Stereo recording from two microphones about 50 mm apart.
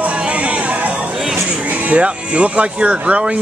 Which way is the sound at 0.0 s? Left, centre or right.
Right.